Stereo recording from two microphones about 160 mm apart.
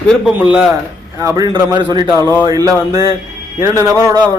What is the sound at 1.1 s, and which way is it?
A man's voice, 20° right (ahead or behind).